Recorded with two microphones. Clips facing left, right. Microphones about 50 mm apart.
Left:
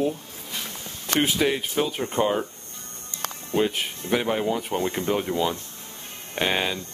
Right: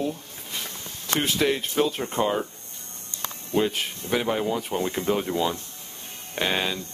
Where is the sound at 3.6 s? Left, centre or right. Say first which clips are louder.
Even; centre.